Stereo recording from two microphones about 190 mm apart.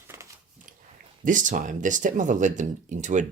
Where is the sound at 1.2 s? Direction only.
45° right (ahead or behind).